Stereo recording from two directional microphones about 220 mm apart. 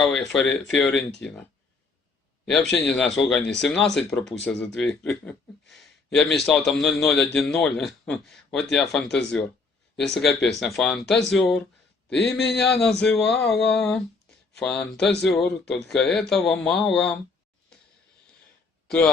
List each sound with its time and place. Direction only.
0.0 s speech: centre (ahead or behind)
2.7 s speech: 5° left (ahead or behind)
12.1 s a man's voice: 50° left (ahead or behind)
12.8 s speech: 5° left (ahead or behind)
18.9 s speech: 5° left (ahead or behind)